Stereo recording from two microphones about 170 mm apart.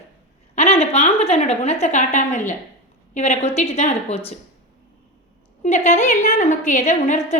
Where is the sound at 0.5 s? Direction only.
40° left (ahead or behind).